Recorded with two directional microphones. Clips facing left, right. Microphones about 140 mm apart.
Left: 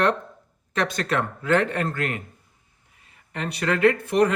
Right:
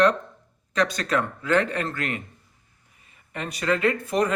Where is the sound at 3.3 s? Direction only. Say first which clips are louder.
Even; 65° left (ahead or behind).